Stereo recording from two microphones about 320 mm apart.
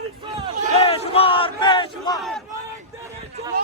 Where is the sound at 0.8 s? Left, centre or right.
Centre.